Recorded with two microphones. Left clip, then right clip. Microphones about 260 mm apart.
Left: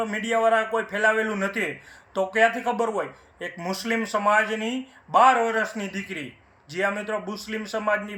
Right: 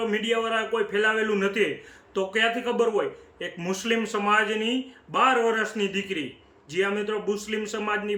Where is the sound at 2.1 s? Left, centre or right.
Right.